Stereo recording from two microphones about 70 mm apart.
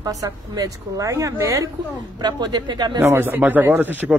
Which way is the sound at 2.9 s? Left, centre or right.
Right.